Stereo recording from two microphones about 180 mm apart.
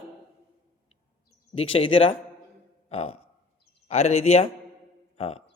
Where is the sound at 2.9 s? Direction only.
35° left (ahead or behind).